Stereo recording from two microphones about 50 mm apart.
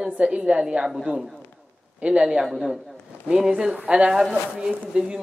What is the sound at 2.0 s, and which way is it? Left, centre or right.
Speech, centre.